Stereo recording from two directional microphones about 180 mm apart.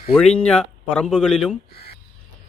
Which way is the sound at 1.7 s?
60° left (ahead or behind).